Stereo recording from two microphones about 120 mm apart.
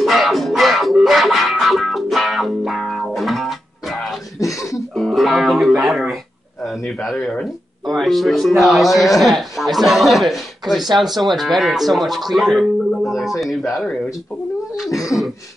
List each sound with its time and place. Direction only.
0.0 s music: centre (ahead or behind)
4.4 s a sound: 25° left (ahead or behind)
4.9 s music: centre (ahead or behind)
6.9 s speech: centre (ahead or behind)
14.9 s speech: 25° left (ahead or behind)